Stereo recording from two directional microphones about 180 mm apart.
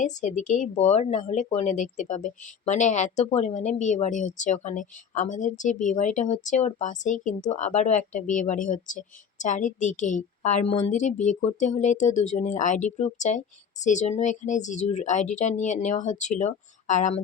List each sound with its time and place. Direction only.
0.0 s a woman's voice: 40° left (ahead or behind)